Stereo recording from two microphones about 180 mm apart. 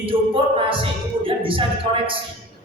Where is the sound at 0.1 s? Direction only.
30° right (ahead or behind).